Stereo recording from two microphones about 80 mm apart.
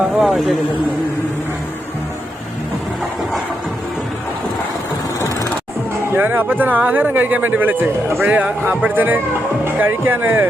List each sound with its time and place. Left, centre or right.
0.0 s a man's voice: centre
6.1 s a man's voice: right